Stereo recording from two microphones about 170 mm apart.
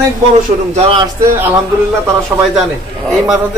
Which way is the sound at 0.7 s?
35° right (ahead or behind).